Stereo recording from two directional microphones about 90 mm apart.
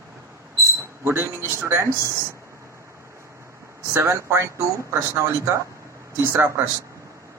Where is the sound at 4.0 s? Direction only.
30° right (ahead or behind).